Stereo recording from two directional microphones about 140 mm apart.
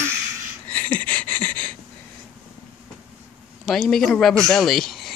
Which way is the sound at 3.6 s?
Centre (ahead or behind).